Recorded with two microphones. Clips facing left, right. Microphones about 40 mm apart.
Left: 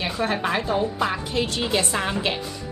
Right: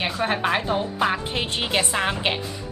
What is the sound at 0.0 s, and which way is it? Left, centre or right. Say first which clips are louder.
A woman's voice: right 1 dB; right.